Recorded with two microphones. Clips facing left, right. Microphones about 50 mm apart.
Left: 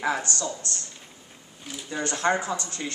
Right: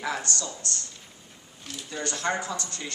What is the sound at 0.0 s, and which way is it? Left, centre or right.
Speech, left.